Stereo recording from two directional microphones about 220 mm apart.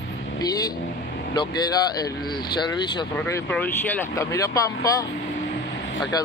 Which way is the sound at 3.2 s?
10° left (ahead or behind).